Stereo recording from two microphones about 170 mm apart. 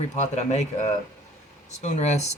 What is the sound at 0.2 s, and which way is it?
Speech, 45° left (ahead or behind).